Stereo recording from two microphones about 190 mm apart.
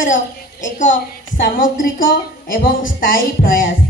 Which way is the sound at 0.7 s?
45° left (ahead or behind).